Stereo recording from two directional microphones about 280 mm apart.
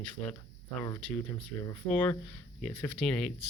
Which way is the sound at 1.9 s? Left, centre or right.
Centre.